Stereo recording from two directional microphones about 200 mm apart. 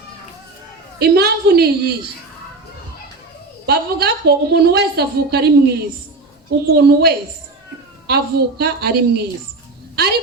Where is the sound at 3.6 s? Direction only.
55° right (ahead or behind).